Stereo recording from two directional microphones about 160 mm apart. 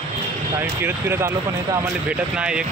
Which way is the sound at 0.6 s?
15° right (ahead or behind).